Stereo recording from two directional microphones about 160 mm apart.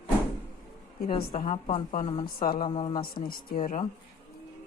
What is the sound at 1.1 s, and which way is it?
A woman's voice, 40° left (ahead or behind).